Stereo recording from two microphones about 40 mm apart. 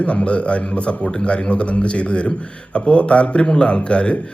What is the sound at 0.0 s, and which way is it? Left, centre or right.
A man's voice, left.